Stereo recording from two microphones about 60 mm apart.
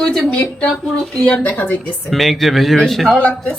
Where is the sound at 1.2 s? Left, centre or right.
Left.